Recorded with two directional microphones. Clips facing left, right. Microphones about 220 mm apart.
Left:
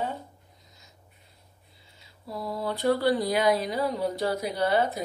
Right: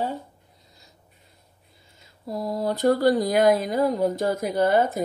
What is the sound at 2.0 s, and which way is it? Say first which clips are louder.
Speech: right 6 dB; 45° right (ahead or behind).